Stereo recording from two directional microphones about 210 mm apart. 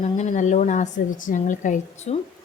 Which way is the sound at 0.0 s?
35° left (ahead or behind).